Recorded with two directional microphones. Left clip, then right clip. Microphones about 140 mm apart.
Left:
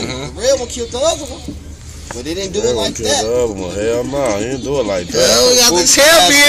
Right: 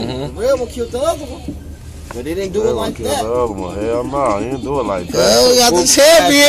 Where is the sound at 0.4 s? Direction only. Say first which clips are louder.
Left 1 dB; 25° left (ahead or behind).